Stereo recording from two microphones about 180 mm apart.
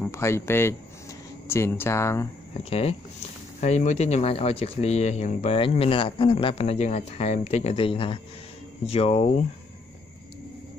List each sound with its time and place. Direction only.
0.0 s speech: 15° left (ahead or behind)
2.7 s speech: 35° left (ahead or behind)